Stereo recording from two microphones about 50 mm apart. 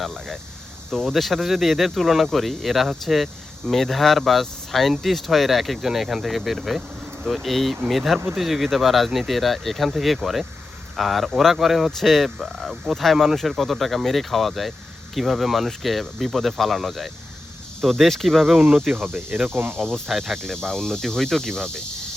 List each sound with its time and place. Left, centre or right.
0.0 s speech: centre
18.9 s speech: right
20.1 s speech: centre
20.4 s cricket: centre